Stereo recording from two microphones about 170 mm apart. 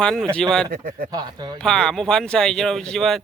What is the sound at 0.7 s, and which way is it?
Speech, 60° right (ahead or behind).